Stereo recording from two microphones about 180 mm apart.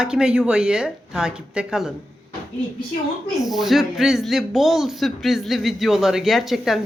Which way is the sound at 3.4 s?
Centre (ahead or behind).